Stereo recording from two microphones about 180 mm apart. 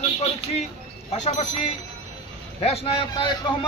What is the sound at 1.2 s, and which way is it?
A man's voice, 35° left (ahead or behind).